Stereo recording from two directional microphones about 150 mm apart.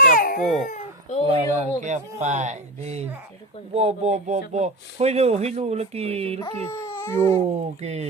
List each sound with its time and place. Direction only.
0.0 s baby cry: 65° left (ahead or behind)
1.3 s speech: 45° right (ahead or behind)
6.4 s speech: 15° left (ahead or behind)
7.3 s speech: 45° right (ahead or behind)